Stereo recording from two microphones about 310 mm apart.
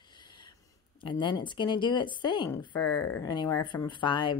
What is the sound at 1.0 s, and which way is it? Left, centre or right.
Speech, centre.